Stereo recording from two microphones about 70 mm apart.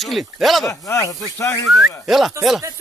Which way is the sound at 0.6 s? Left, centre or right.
Left.